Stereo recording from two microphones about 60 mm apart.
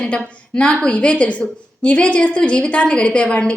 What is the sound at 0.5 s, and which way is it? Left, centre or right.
A woman's voice, centre.